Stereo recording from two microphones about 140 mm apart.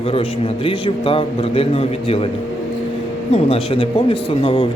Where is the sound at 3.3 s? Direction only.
45° left (ahead or behind).